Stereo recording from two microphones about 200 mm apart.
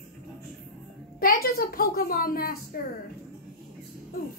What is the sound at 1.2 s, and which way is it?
A woman's voice, 45° left (ahead or behind).